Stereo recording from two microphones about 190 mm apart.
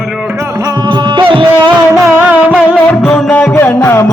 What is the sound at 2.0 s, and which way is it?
Music, 10° right (ahead or behind).